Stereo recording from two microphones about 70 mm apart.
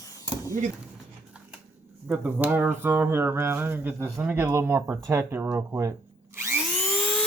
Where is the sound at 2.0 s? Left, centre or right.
Centre.